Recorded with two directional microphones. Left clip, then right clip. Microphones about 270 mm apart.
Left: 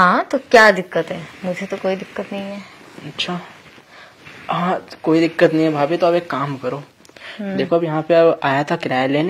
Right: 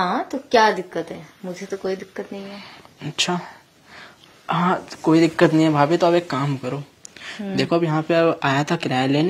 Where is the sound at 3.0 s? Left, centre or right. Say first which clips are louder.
Right 2 dB; right.